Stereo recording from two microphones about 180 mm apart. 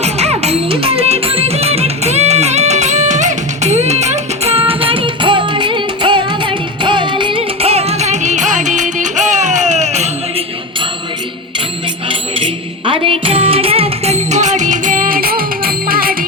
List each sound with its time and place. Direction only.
0.0 s music: 35° right (ahead or behind)
12.0 s music: 30° right (ahead or behind); by 16.1 s 55° right (ahead or behind)